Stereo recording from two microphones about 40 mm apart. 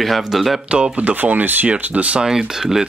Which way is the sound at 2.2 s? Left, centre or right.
Centre.